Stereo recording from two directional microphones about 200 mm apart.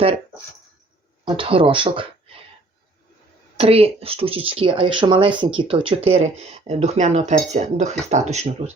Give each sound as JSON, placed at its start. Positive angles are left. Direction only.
{"t": 1.2, "sound": "speech", "side_deg": -25}
{"t": 3.6, "sound": "speech", "side_deg": -30}